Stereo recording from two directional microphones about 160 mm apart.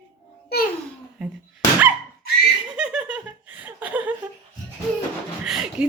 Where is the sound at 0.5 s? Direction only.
90° left.